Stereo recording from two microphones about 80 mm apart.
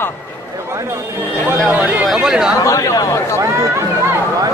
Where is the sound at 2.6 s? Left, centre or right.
Left.